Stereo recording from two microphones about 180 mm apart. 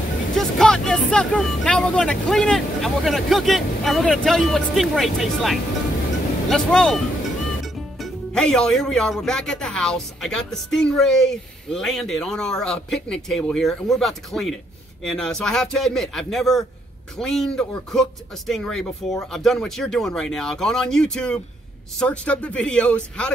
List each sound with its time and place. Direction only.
0.4 s speech: 5° left (ahead or behind)